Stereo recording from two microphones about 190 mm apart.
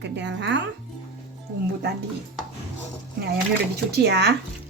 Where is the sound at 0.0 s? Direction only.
65° right (ahead or behind).